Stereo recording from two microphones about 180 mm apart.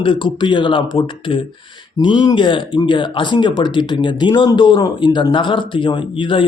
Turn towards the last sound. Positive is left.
turn(degrees=30)  # may be behind; listen again after turning